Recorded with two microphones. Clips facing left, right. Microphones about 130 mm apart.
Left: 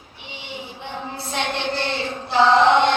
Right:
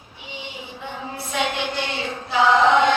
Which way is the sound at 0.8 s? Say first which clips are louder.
Right 1 dB; 30° left (ahead or behind).